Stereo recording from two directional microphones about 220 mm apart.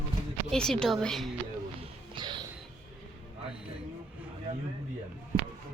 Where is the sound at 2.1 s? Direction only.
20° right (ahead or behind).